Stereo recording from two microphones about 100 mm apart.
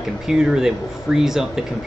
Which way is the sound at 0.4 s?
5° right (ahead or behind).